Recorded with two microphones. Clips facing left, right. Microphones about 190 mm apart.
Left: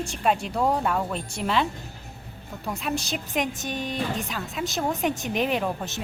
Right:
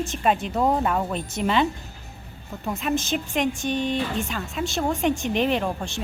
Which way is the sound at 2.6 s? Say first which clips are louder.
Right 3 dB; centre (ahead or behind).